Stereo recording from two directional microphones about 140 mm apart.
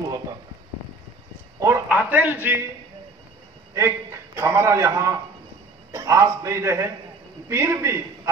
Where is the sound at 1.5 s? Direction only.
20° right (ahead or behind).